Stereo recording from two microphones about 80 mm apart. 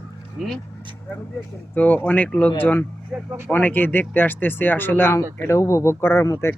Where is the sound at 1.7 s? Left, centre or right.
Left.